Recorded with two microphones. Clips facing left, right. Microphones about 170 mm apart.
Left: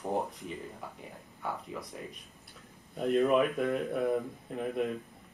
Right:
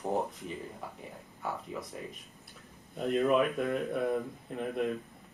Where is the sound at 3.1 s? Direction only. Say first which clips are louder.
Left 1 dB; centre (ahead or behind).